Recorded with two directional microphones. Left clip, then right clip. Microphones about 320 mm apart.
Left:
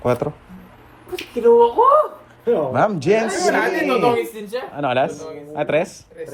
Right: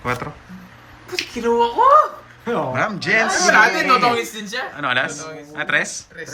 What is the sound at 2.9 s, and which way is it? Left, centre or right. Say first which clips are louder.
Speech: right 1 dB; centre.